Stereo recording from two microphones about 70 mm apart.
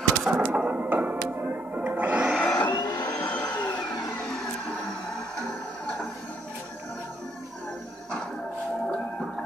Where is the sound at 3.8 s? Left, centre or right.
Left.